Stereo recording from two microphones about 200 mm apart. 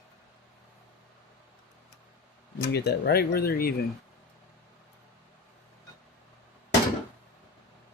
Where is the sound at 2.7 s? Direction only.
55° left (ahead or behind).